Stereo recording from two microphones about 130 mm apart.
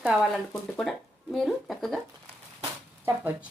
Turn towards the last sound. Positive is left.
turn(degrees=-15)  # may be behind; listen again after turning